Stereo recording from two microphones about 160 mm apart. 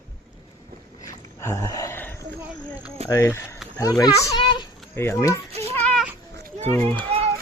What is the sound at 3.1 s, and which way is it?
A child's voice, 15° left (ahead or behind).